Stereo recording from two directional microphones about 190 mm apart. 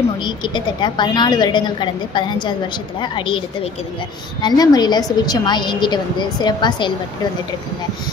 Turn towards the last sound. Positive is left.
turn(degrees=25)  # may be behind; listen again after turning